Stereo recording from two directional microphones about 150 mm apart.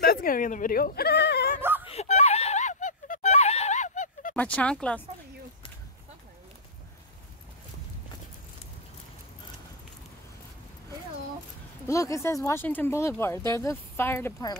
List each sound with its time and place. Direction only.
0.0 s sheep: 80° left
1.9 s a sound: 45° left (ahead or behind)
4.4 s speech: 10° left (ahead or behind)
11.9 s speech: 20° left (ahead or behind)